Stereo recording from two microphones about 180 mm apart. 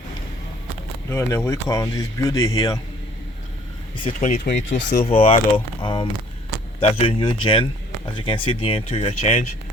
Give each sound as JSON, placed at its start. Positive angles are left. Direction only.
{"t": 1.1, "sound": "speech", "side_deg": 15}
{"t": 4.2, "sound": "speech", "side_deg": 45}
{"t": 5.0, "sound": "speech", "side_deg": 30}